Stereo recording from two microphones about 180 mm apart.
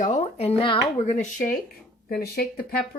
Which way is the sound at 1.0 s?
45° left (ahead or behind).